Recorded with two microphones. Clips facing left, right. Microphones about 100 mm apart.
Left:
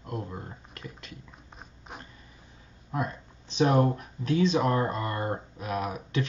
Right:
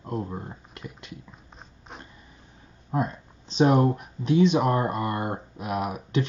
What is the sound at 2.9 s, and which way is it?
Speech, 30° right (ahead or behind).